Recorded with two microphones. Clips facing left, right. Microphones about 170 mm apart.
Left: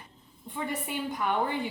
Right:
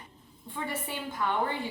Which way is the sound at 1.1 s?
15° left (ahead or behind).